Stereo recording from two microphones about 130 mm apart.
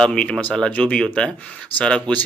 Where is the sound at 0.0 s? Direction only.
10° left (ahead or behind).